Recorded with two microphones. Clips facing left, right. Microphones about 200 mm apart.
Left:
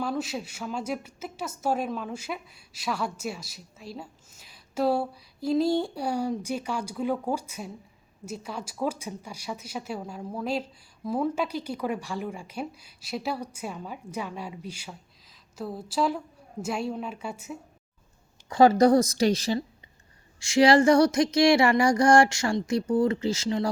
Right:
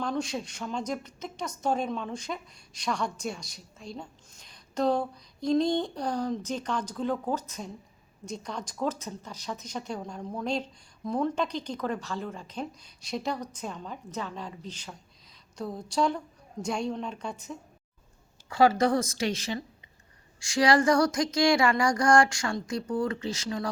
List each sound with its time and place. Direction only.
0.0 s speech: 5° left (ahead or behind)
18.8 s speech: 40° left (ahead or behind)
20.4 s a sound: 25° left (ahead or behind)